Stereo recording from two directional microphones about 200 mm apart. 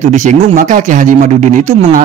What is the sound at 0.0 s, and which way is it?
Speech, 35° right (ahead or behind).